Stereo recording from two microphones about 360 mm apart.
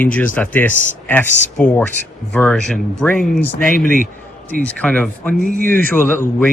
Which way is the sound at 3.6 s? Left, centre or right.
Left.